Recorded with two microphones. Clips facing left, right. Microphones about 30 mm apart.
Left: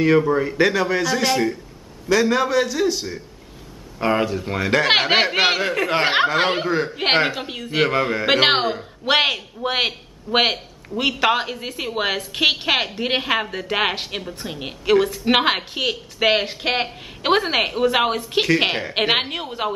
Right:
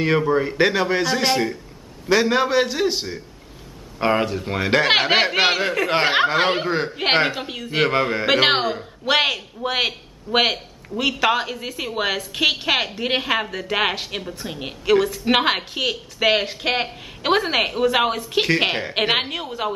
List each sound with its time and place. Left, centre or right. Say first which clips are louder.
0.0 s a man's voice: left 2 dB; centre
2.0 s a man's voice: even; right
4.1 s a man's voice: left 1 dB; centre
4.8 s a man's voice: left 1 dB; centre